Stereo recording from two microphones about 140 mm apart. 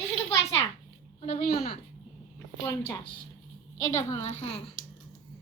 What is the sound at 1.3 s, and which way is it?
Speech, 90° left.